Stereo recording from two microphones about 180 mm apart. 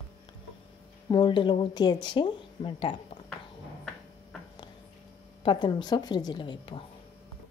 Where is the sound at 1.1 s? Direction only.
25° left (ahead or behind).